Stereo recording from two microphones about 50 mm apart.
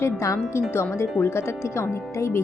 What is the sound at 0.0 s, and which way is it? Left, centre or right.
Speech, left.